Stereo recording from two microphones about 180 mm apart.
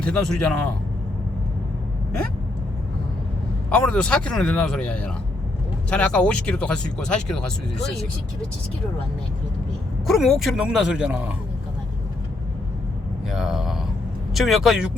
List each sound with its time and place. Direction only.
0.0 s speech: 5° left (ahead or behind)
3.7 s speech: 5° left (ahead or behind)
10.1 s speech: centre (ahead or behind)
13.3 s speech: centre (ahead or behind)